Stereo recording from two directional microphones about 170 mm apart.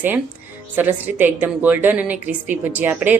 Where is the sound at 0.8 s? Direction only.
10° right (ahead or behind).